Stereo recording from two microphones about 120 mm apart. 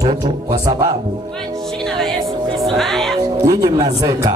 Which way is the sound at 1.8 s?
5° left (ahead or behind).